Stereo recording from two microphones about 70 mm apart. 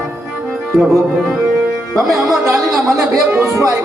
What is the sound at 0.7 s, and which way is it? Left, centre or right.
Music, centre.